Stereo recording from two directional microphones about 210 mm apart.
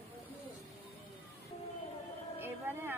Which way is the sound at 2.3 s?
10° right (ahead or behind).